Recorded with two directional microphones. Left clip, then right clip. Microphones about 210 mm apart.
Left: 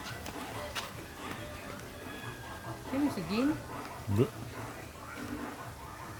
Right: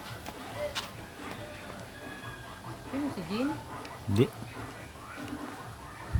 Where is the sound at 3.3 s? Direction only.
45° left (ahead or behind).